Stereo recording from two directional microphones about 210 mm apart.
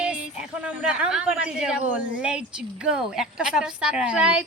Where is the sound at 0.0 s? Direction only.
5° right (ahead or behind).